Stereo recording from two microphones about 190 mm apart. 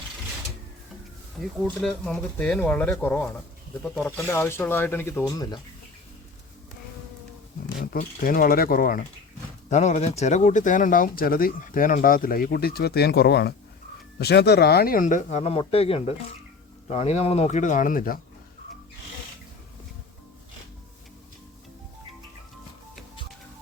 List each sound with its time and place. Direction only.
1.4 s speech: 5° right (ahead or behind); by 5.5 s 20° left (ahead or behind)
7.9 s speech: 50° left (ahead or behind)
9.6 s speech: 35° left (ahead or behind)